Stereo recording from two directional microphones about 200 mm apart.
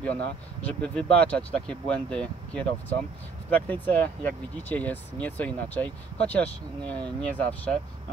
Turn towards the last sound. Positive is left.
turn(degrees=5)  # may be behind; listen again after turning